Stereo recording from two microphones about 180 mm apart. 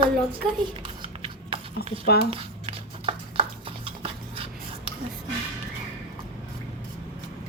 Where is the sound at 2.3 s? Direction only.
30° right (ahead or behind).